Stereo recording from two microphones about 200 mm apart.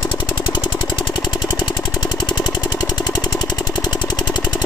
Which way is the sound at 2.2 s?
20° left (ahead or behind).